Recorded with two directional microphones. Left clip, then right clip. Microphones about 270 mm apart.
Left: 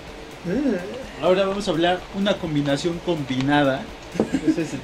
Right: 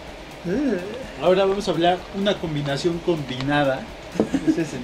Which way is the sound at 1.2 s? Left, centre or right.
Left.